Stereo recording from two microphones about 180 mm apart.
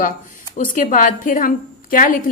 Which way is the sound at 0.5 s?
45° left (ahead or behind).